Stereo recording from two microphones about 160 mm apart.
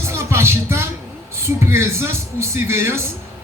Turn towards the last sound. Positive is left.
turn(degrees=-15)  # may be behind; listen again after turning